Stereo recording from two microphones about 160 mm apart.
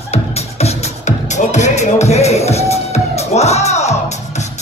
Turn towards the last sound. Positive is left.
turn(degrees=45)  # may be behind; listen again after turning